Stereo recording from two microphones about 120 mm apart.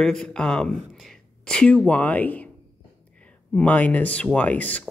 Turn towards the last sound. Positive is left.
turn(degrees=15)  # may be behind; listen again after turning